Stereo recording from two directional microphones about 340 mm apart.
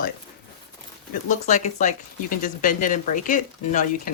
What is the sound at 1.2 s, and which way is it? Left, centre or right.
Speech, left.